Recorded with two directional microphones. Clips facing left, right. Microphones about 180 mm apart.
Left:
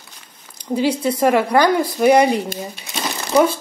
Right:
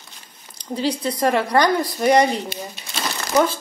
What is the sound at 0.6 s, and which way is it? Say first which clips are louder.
A woman's voice: left 4 dB; 10° left (ahead or behind).